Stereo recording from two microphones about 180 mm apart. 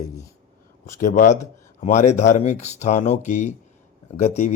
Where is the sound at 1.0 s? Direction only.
45° left (ahead or behind).